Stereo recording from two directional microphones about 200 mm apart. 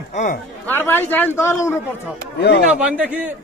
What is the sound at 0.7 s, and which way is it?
A man's voice, 10° left (ahead or behind).